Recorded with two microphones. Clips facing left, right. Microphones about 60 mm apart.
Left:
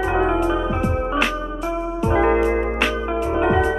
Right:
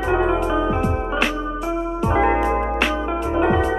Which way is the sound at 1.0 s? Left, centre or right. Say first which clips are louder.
Left 1 dB; centre.